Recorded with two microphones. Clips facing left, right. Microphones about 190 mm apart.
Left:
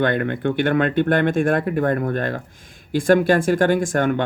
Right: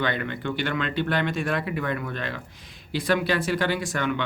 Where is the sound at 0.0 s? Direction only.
50° left (ahead or behind).